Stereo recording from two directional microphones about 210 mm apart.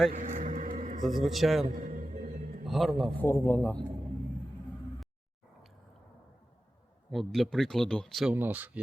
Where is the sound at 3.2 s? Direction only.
10° left (ahead or behind).